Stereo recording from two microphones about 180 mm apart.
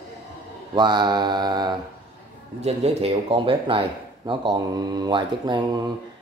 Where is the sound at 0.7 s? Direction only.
25° right (ahead or behind).